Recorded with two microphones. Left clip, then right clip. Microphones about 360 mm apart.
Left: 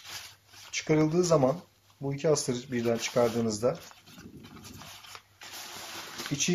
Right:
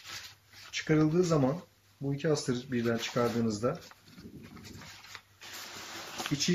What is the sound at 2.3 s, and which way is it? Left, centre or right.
Speech, centre.